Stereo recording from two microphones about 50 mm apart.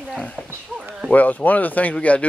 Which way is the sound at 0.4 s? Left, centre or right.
Centre.